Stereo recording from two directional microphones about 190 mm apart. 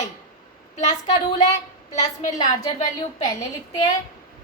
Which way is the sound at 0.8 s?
35° left (ahead or behind).